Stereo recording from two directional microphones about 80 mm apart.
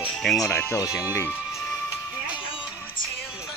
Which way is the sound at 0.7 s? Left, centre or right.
Left.